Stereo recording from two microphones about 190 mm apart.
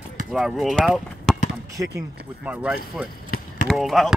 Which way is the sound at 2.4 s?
5° right (ahead or behind).